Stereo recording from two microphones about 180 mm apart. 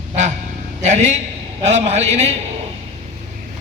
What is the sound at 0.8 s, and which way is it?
A man's voice, 40° right (ahead or behind).